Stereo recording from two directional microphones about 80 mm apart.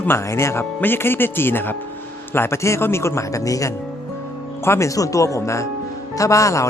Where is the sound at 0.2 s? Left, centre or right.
Left.